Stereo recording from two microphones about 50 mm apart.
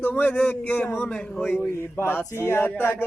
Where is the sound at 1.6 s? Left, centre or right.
Left.